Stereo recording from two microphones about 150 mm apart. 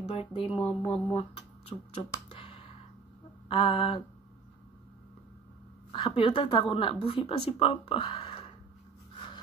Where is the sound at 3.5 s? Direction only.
40° left (ahead or behind).